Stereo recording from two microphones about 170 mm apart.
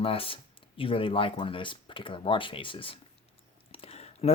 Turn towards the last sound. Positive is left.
turn(degrees=35)  # may be behind; listen again after turning